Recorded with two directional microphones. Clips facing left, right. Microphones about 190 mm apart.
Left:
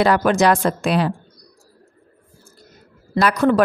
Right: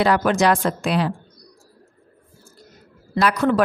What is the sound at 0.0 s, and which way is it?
Speech, 50° left (ahead or behind).